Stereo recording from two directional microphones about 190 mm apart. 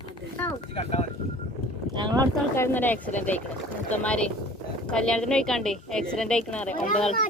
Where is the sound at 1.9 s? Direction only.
25° right (ahead or behind).